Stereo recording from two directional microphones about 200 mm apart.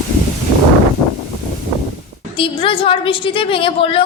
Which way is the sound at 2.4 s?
25° left (ahead or behind).